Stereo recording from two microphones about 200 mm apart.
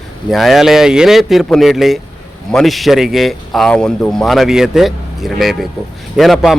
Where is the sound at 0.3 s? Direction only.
Centre (ahead or behind).